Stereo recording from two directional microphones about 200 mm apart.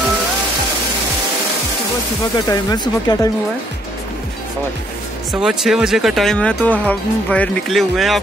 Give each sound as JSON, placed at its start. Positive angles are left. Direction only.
{"t": 2.3, "sound": "speech", "side_deg": 20}
{"t": 5.3, "sound": "speech", "side_deg": -5}